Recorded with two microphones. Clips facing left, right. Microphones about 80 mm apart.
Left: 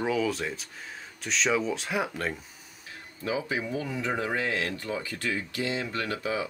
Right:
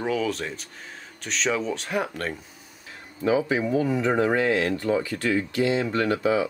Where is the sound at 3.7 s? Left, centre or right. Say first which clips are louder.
Right 11 dB; right.